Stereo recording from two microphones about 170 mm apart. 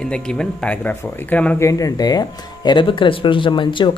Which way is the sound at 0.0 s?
5° left (ahead or behind).